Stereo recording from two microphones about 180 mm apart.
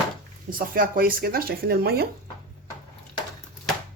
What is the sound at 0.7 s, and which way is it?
Speech, 50° right (ahead or behind).